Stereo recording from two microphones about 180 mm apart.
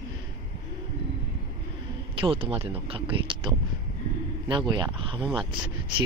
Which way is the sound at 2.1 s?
30° right (ahead or behind).